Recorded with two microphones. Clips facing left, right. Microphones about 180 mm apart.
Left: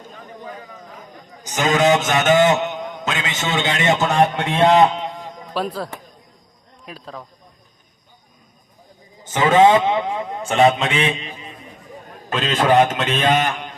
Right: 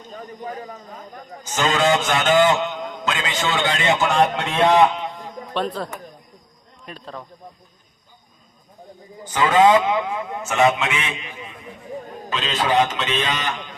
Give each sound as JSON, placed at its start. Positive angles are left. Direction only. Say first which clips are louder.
{"t": 0.4, "sound": "a man's voice", "louder": "right 4 dB", "side_deg": -40}
{"t": 1.5, "sound": "a man's voice", "louder": "left 3 dB", "side_deg": 15}
{"t": 5.5, "sound": "speech", "louder": "left 1 dB", "side_deg": 5}
{"t": 9.2, "sound": "a man's voice", "louder": "left 2 dB", "side_deg": 25}
{"t": 12.3, "sound": "a man's voice", "louder": "left 5 dB", "side_deg": 50}